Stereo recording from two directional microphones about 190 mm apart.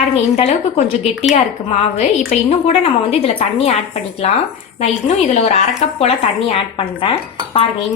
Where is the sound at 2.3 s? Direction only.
30° left (ahead or behind).